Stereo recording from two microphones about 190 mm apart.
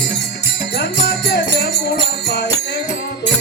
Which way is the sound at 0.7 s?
65° left (ahead or behind).